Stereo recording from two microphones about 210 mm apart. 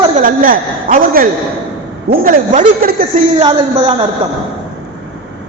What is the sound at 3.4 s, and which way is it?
Speech, 25° right (ahead or behind).